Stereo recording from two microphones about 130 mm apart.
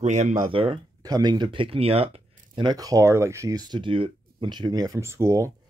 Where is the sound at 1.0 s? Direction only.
30° right (ahead or behind); by 2.6 s 50° right (ahead or behind).